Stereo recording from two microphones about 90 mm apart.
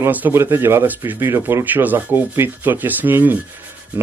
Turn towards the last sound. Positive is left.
turn(degrees=-20)  # may be behind; listen again after turning